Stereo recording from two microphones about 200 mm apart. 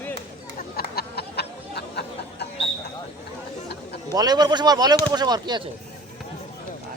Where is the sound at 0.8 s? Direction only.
50° left (ahead or behind).